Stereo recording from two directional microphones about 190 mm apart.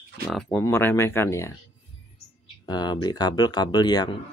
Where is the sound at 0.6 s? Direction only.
10° left (ahead or behind).